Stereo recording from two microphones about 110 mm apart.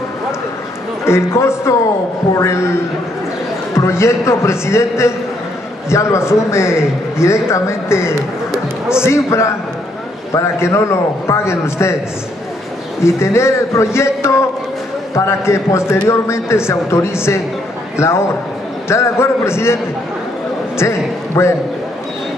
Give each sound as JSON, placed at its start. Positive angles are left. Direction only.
{"t": 1.0, "sound": "a man's voice", "side_deg": 25}
{"t": 3.7, "sound": "a man's voice", "side_deg": 25}
{"t": 8.5, "sound": "a sound", "side_deg": -5}
{"t": 9.0, "sound": "a man's voice", "side_deg": 25}
{"t": 13.0, "sound": "a man's voice", "side_deg": 25}
{"t": 20.8, "sound": "a man's voice", "side_deg": 25}